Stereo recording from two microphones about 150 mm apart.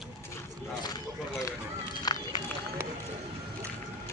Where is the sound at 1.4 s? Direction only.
25° left (ahead or behind).